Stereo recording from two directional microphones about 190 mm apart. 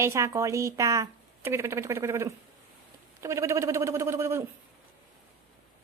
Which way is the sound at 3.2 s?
15° right (ahead or behind).